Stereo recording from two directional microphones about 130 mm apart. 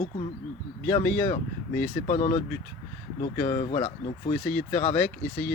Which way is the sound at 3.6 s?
45° left (ahead or behind).